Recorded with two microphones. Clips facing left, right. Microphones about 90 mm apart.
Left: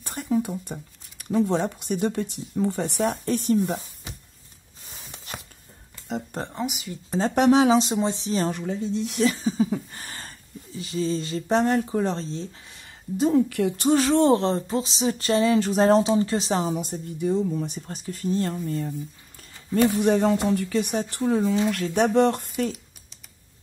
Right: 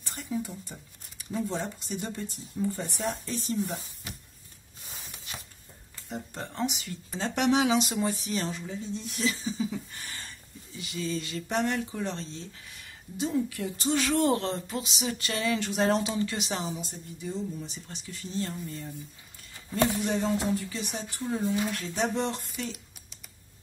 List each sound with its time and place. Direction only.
0.0 s speech: 55° left (ahead or behind)
6.5 s speech: 5° left (ahead or behind)
7.1 s speech: 40° left (ahead or behind)
8.5 s speech: 65° left (ahead or behind)
9.2 s speech: 50° left (ahead or behind)
13.3 s speech: 70° left (ahead or behind)
13.8 s speech: 35° left (ahead or behind)
16.7 s speech: 55° left (ahead or behind)
20.0 s speech: 60° left (ahead or behind); by 21.5 s 90° left
21.7 s speech: 60° left (ahead or behind)